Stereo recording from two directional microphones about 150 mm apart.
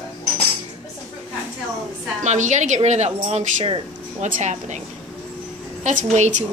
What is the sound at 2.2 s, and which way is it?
A woman's voice, 55° right (ahead or behind).